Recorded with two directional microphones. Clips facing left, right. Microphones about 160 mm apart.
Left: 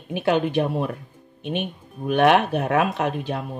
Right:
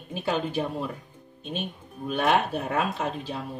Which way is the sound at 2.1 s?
70° left (ahead or behind).